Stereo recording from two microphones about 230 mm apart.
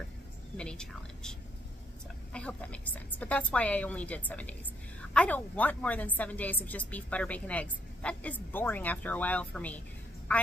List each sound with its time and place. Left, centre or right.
0.6 s a woman's voice: centre
2.3 s a woman's voice: centre